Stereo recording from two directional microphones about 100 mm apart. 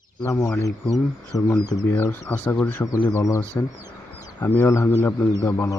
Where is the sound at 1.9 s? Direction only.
20° left (ahead or behind).